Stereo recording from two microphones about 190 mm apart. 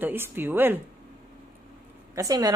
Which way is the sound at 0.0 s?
10° right (ahead or behind).